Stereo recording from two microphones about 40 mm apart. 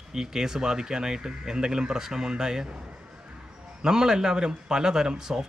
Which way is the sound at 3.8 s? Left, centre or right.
Centre.